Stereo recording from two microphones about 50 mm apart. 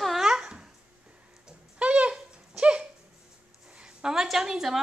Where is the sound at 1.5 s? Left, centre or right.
Right.